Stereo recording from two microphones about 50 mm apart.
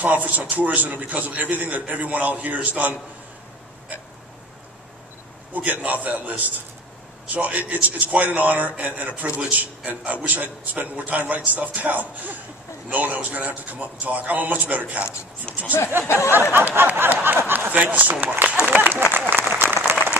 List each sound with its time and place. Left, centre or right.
0.0 s a man's voice: right
5.5 s a man's voice: right
15.5 s speech: left
16.1 s a sound: left
16.5 s speech: right
17.6 s a man's voice: right
18.7 s a sound: right
19.3 s applause: right